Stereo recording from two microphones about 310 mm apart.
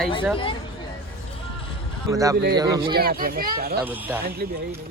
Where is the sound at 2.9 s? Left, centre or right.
Right.